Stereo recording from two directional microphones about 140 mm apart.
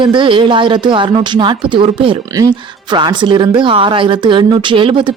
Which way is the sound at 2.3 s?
25° right (ahead or behind).